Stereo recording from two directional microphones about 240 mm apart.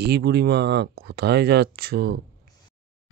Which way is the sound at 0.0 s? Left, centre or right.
Right.